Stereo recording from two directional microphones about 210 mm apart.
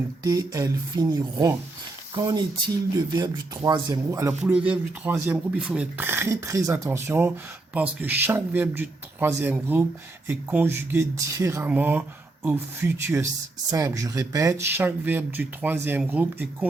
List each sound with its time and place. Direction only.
0.3 s speech: 15° right (ahead or behind)